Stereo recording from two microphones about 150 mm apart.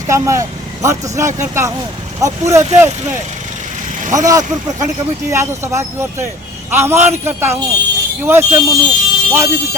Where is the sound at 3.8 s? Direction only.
55° right (ahead or behind).